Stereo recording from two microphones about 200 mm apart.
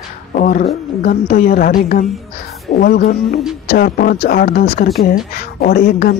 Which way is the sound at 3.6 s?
50° left (ahead or behind).